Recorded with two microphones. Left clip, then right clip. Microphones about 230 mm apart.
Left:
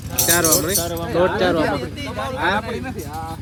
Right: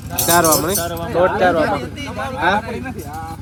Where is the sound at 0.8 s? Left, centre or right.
Left.